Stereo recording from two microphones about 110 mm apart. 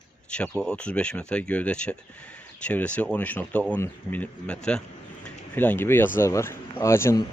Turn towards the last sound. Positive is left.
turn(degrees=25)  # may be behind; listen again after turning